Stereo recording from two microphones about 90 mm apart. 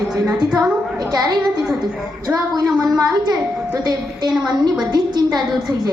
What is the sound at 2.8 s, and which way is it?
A child's voice, 45° right (ahead or behind).